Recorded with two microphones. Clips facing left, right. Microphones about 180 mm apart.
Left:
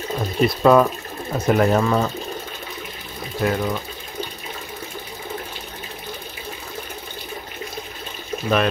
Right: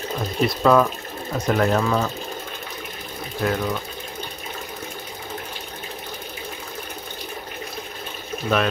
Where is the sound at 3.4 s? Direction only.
Centre (ahead or behind).